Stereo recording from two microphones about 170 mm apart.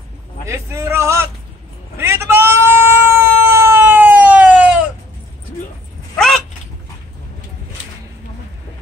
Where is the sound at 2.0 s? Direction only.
15° right (ahead or behind).